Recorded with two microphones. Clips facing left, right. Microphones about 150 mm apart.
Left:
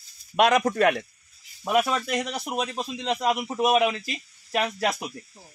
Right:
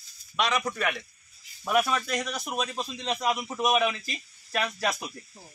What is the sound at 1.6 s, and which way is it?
Speech, 20° left (ahead or behind).